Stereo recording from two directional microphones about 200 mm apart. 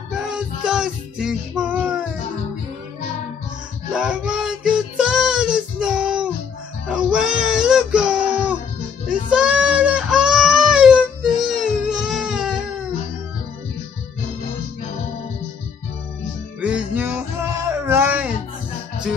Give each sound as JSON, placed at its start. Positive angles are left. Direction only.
{"t": 0.2, "sound": "music", "side_deg": -5}
{"t": 3.9, "sound": "music", "side_deg": -5}
{"t": 9.3, "sound": "baby cry", "side_deg": -5}
{"t": 16.6, "sound": "music", "side_deg": -5}